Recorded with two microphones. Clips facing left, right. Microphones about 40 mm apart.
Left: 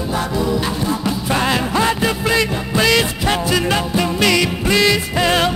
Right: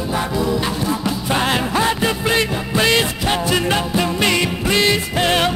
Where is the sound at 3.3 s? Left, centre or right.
Right.